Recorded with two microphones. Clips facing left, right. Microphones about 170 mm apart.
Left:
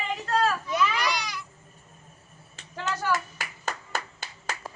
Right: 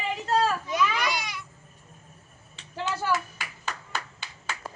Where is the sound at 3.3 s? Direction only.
45° left (ahead or behind).